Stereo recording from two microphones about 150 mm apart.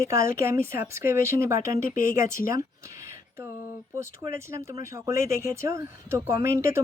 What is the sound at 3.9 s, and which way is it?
Speech, 20° right (ahead or behind).